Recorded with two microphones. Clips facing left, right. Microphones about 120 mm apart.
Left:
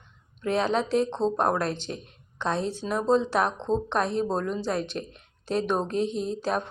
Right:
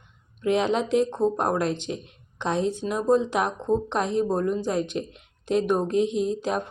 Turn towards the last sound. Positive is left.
turn(degrees=-15)  # may be behind; listen again after turning